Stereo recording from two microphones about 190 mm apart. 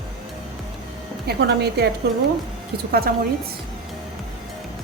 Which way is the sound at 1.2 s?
55° right (ahead or behind).